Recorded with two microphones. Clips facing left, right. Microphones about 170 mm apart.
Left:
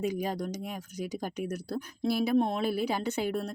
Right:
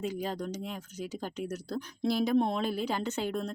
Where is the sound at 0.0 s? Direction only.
15° left (ahead or behind).